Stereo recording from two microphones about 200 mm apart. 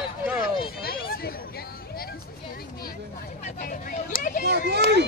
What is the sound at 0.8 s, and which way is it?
Hubbub, 50° left (ahead or behind).